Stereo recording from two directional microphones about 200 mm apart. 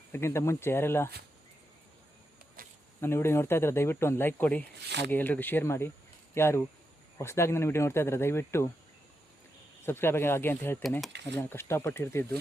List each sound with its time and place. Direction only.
0.1 s speech: 15° left (ahead or behind)
2.6 s a sound: 45° right (ahead or behind)
3.0 s speech: 10° left (ahead or behind)
4.9 s speech: 60° right (ahead or behind)
5.1 s speech: 10° left (ahead or behind)
9.8 s speech: 10° left (ahead or behind)
11.3 s speech: 10° left (ahead or behind)